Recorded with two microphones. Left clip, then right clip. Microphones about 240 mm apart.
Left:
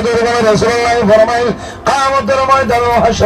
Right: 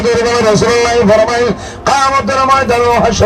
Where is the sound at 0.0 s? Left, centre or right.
Right.